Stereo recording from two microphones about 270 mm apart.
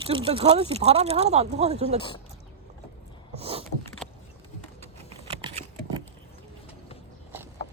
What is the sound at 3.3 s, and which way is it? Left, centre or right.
Vehicle, right.